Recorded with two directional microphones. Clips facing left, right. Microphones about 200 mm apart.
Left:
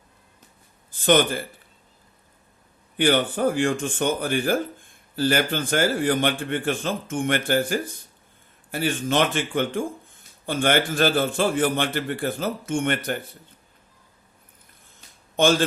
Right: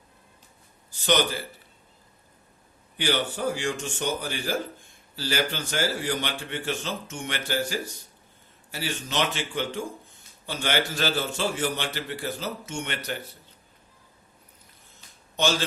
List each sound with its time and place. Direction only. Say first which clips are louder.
0.9 s speech: left 5 dB; 50° left (ahead or behind)
3.0 s speech: left 6 dB; 55° left (ahead or behind)
15.4 s speech: left 6 dB; 50° left (ahead or behind)